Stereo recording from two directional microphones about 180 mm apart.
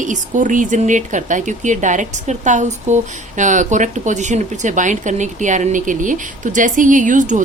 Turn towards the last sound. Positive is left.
turn(degrees=-45)  # may be behind; listen again after turning